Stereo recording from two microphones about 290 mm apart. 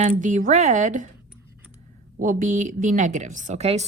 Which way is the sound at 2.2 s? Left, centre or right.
Right.